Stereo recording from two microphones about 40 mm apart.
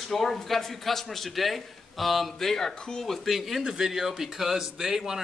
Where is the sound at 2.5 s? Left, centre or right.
Centre.